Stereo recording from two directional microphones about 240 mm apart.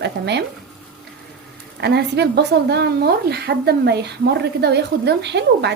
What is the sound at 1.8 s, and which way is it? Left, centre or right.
A woman's voice, right.